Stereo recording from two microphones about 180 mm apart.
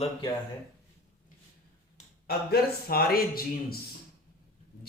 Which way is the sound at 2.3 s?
60° left (ahead or behind).